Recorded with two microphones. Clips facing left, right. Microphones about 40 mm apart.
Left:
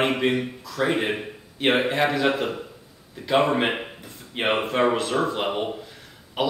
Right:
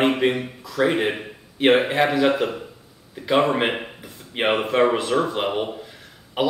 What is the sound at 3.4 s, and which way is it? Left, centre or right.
Speech, centre.